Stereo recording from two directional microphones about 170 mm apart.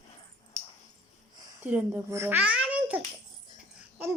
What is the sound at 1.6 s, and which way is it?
A child's voice, 10° right (ahead or behind).